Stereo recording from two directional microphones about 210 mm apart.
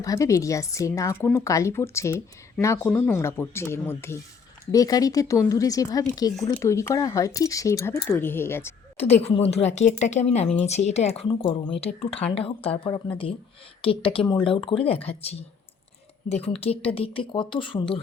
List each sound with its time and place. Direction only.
0.0 s speech: 15° left (ahead or behind)
9.0 s a woman's voice: 30° left (ahead or behind)
16.6 s speech: 25° left (ahead or behind)